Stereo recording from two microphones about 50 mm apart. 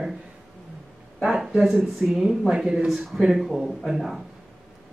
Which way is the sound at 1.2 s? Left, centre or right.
Centre.